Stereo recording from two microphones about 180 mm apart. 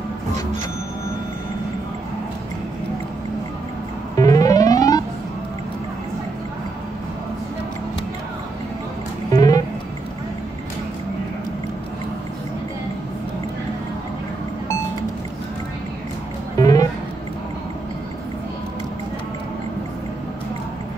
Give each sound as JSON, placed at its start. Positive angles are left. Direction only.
{"t": 4.2, "sound": "music", "side_deg": 20}
{"t": 9.3, "sound": "music", "side_deg": 20}
{"t": 16.5, "sound": "music", "side_deg": 20}